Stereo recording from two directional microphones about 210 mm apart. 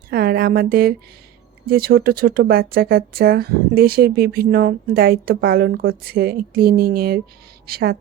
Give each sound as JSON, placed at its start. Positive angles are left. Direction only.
{"t": 0.1, "sound": "speech", "side_deg": -45}